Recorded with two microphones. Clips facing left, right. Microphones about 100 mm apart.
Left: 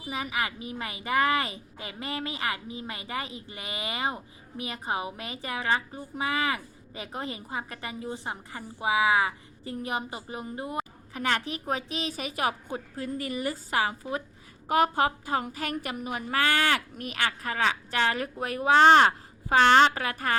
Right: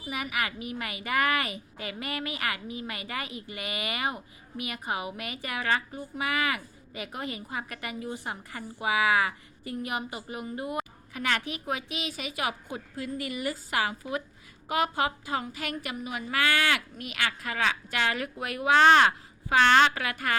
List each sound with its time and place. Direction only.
0.1 s a woman's voice: 25° left (ahead or behind)